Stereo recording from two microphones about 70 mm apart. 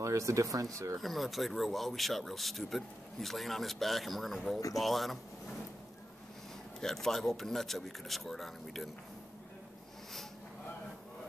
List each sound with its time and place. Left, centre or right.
0.0 s speech: right
1.0 s speech: centre
6.8 s speech: centre